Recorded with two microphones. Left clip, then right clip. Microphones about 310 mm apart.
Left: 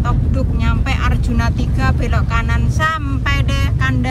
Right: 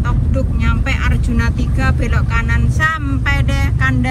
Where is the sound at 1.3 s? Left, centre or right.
Centre.